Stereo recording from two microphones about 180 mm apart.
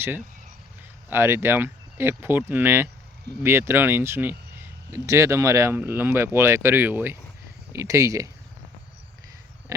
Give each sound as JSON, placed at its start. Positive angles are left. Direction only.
{"t": 1.1, "sound": "speech", "side_deg": -15}